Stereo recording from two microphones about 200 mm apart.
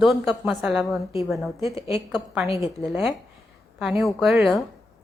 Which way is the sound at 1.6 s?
15° right (ahead or behind).